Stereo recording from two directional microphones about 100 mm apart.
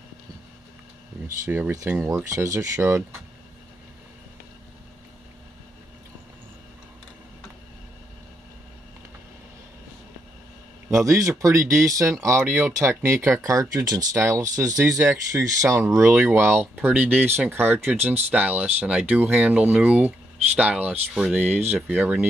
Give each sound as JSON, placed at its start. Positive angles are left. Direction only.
{"t": 1.2, "sound": "speech", "side_deg": -20}
{"t": 10.9, "sound": "speech", "side_deg": -30}